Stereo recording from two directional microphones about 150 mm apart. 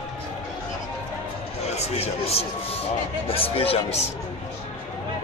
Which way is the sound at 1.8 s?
40° left (ahead or behind).